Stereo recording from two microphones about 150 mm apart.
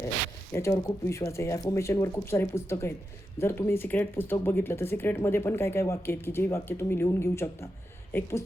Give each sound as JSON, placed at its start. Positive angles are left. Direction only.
{"t": 0.5, "sound": "speech", "side_deg": 20}